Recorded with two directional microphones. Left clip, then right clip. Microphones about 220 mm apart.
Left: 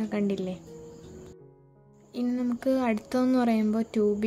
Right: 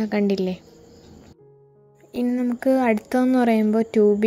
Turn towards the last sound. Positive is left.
turn(degrees=-15)  # may be behind; listen again after turning